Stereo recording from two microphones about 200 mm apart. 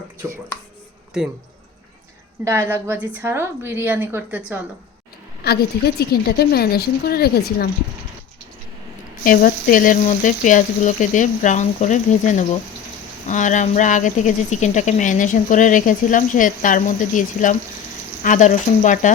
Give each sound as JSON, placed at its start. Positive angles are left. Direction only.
{"t": 2.4, "sound": "a woman's voice", "side_deg": -15}
{"t": 5.4, "sound": "a woman's voice", "side_deg": 50}
{"t": 9.2, "sound": "speech", "side_deg": 45}